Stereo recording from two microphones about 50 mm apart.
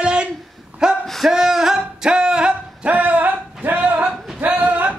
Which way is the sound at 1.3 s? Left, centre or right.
Centre.